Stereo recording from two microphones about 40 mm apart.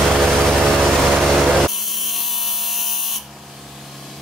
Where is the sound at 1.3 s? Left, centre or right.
Centre.